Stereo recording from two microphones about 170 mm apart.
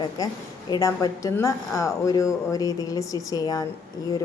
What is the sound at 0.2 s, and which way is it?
A woman's voice, 20° left (ahead or behind).